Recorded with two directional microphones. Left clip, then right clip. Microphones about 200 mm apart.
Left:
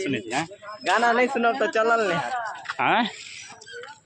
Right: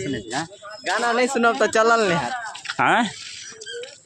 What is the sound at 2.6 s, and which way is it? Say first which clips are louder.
Speech: right 4 dB; 20° right (ahead or behind).